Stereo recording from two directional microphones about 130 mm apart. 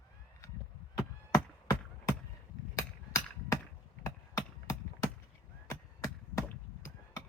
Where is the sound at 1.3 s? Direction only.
25° left (ahead or behind).